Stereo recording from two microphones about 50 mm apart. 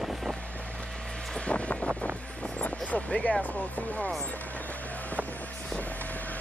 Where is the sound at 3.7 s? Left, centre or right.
Left.